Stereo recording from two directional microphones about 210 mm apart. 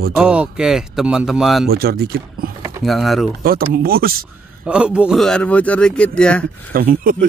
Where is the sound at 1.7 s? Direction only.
45° right (ahead or behind).